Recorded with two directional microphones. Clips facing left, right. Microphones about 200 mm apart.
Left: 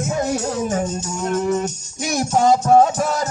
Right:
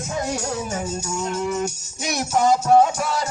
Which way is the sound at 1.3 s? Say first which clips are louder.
Left 7 dB; 50° left (ahead or behind).